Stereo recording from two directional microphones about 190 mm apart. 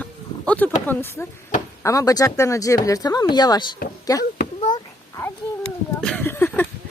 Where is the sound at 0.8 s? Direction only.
10° left (ahead or behind).